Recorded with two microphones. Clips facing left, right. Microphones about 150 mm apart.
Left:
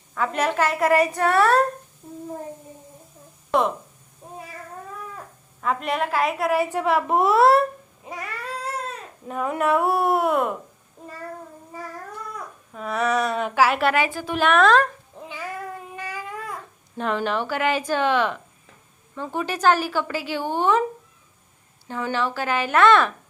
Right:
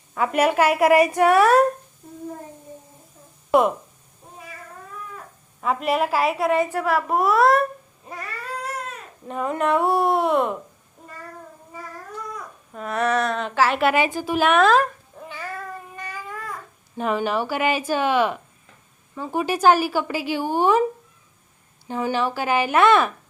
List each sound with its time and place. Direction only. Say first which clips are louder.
0.1 s a woman's voice: right 4 dB; 10° right (ahead or behind)
3.5 s a woman's voice: right 4 dB; 10° right (ahead or behind)
5.5 s speech: right 3 dB; 5° right (ahead or behind)
6.6 s a woman's voice: even; 15° left (ahead or behind)
8.0 s baby cry: left 2 dB; 15° left (ahead or behind)
9.2 s speech: even; 5° left (ahead or behind)
12.7 s speech: right 1 dB; centre (ahead or behind)
13.9 s a woman's voice: right 2 dB; 20° right (ahead or behind)
14.3 s speech: even; 5° right (ahead or behind)
15.2 s cat: even; 15° left (ahead or behind)
16.0 s baby cry: left 2 dB; 15° left (ahead or behind)
17.0 s a woman's voice: right 2 dB; 5° right (ahead or behind)
21.8 s a woman's voice: right 2 dB; 15° right (ahead or behind)